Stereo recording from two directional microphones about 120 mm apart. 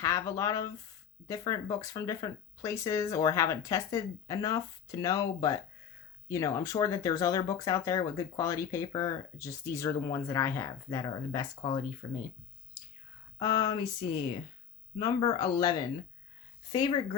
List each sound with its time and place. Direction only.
0.0 s speech: 25° left (ahead or behind)
13.4 s a sound: 35° left (ahead or behind)
16.7 s speech: 40° left (ahead or behind)